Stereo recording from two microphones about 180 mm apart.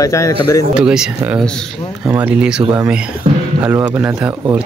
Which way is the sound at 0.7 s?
5° right (ahead or behind).